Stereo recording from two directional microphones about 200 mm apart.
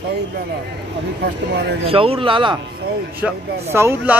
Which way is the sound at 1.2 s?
55° right (ahead or behind).